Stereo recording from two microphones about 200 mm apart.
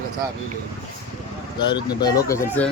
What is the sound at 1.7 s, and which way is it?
Speech, 20° left (ahead or behind).